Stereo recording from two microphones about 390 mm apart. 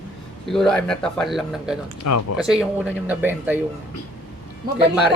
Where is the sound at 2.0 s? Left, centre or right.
Left.